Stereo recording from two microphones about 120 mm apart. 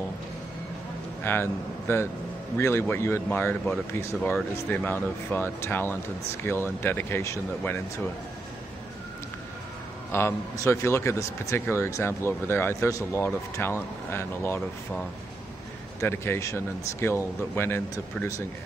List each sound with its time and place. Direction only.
1.2 s speech: 20° left (ahead or behind)
4.2 s speech: 5° left (ahead or behind)
4.6 s speech: 15° left (ahead or behind)
10.1 s speech: 20° left (ahead or behind)
16.0 s speech: 20° left (ahead or behind)